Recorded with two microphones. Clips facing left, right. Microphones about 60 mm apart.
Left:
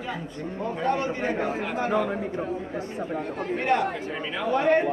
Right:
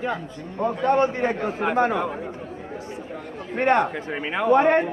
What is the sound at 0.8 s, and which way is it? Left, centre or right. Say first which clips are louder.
A man's voice: right 5 dB; right.